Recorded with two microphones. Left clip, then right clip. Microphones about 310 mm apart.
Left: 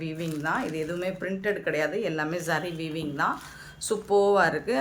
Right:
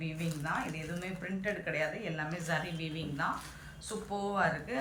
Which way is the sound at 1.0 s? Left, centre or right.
Centre.